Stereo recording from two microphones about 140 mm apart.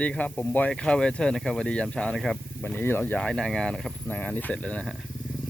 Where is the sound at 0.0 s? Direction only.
10° left (ahead or behind).